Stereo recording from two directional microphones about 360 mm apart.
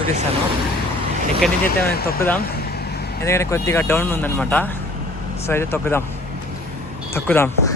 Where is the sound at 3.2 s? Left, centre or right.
Centre.